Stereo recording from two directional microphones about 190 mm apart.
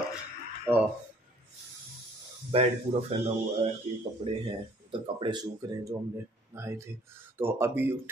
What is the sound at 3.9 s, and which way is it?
Speech, 35° right (ahead or behind).